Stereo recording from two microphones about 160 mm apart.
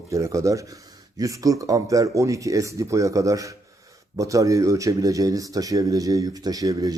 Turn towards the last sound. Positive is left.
turn(degrees=-20)  # may be behind; listen again after turning